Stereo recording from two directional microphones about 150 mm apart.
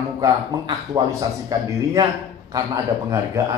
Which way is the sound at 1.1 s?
20° right (ahead or behind).